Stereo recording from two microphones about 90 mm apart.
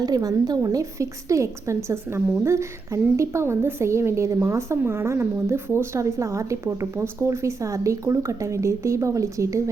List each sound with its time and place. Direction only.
0.0 s a woman's voice: 45° right (ahead or behind)